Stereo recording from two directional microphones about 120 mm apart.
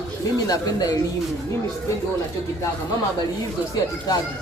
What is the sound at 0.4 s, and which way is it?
Speech, 30° left (ahead or behind).